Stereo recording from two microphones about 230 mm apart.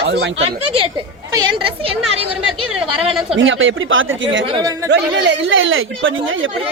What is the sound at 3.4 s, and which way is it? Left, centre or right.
Speech, right.